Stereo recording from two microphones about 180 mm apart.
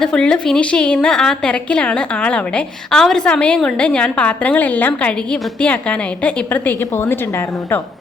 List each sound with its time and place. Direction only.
0.0 s a woman's voice: 5° left (ahead or behind)